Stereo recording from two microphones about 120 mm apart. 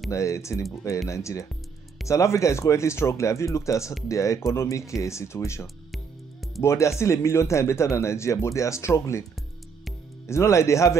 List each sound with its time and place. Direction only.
0.1 s speech: 25° left (ahead or behind)
10.2 s speech: 25° left (ahead or behind)